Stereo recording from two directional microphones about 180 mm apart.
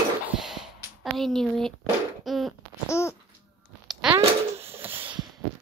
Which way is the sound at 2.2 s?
Centre (ahead or behind).